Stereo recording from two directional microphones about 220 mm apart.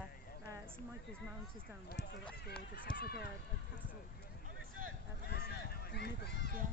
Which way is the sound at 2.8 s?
45° left (ahead or behind).